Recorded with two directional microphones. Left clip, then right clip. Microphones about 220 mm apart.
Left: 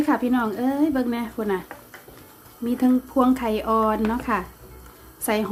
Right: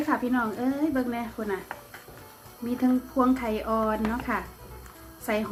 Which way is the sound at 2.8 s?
45° left (ahead or behind).